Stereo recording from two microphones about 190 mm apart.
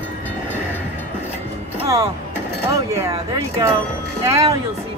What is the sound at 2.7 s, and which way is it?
Speech, 20° right (ahead or behind).